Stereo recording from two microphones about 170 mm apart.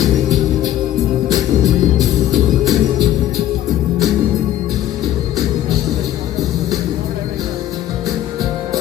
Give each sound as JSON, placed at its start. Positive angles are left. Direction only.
{"t": 1.3, "sound": "music", "side_deg": -25}